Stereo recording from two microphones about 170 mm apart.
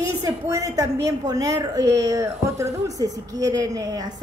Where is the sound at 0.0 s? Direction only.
20° right (ahead or behind).